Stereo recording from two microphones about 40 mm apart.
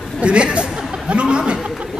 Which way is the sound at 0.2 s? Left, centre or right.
Right.